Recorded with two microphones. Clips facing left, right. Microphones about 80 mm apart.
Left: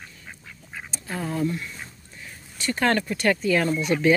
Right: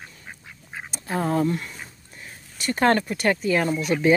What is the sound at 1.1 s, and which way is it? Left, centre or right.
Speech, right.